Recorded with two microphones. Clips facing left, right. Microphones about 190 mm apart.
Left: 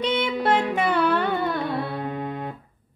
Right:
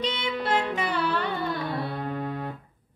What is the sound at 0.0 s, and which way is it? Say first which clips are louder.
Music: left 6 dB; 55° left (ahead or behind).